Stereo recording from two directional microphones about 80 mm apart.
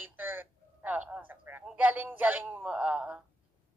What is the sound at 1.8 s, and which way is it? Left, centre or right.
Speech, right.